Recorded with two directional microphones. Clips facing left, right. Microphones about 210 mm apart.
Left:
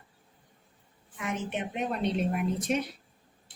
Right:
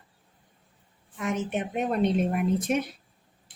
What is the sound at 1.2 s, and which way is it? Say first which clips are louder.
A woman's voice: right 4 dB; 45° right (ahead or behind).